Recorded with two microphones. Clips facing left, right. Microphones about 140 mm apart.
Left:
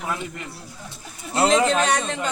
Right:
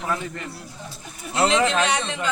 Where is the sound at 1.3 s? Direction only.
40° left (ahead or behind).